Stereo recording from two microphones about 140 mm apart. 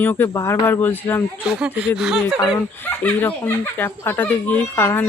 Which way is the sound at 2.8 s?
10° left (ahead or behind).